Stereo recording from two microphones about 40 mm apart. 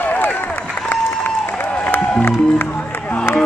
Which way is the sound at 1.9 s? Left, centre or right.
Left.